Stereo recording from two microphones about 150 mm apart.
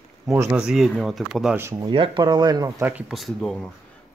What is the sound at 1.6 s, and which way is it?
Speech, 15° right (ahead or behind).